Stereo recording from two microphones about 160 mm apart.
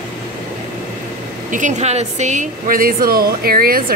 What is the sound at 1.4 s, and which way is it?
A woman's voice, 50° right (ahead or behind).